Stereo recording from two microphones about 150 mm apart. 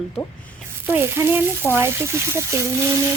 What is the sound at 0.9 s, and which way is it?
Speech, 15° right (ahead or behind).